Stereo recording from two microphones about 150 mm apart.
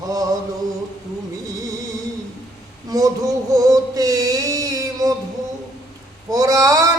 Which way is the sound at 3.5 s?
25° right (ahead or behind).